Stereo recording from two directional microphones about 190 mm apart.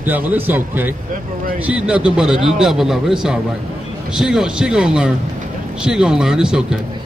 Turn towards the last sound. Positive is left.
turn(degrees=-5)  # may be behind; listen again after turning